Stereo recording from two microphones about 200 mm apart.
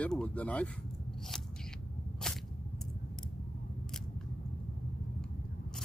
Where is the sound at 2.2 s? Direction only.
5° left (ahead or behind).